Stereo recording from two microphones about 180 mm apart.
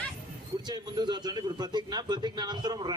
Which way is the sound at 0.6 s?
20° right (ahead or behind).